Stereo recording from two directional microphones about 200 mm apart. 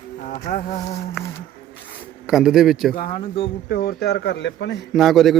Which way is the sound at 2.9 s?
25° left (ahead or behind).